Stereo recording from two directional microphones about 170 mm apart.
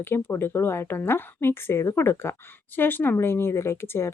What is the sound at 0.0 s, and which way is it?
Speech, 15° left (ahead or behind).